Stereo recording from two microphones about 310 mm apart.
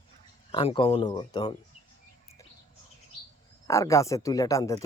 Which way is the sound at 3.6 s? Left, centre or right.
Centre.